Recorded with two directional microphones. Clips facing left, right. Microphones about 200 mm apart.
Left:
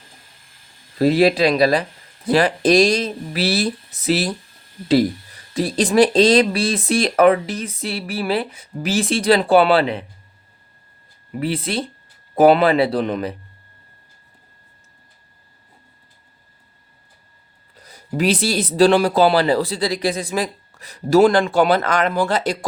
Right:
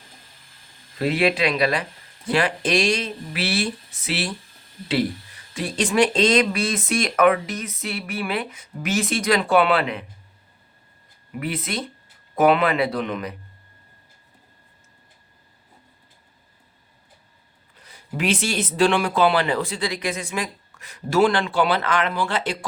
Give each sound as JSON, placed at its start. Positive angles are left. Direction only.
{"t": 0.9, "sound": "speech", "side_deg": 35}
{"t": 5.5, "sound": "speech", "side_deg": 35}
{"t": 11.3, "sound": "speech", "side_deg": 30}
{"t": 17.7, "sound": "speech", "side_deg": 40}